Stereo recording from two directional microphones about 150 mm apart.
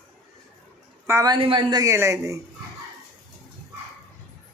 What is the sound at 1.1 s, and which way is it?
Speech, 20° right (ahead or behind).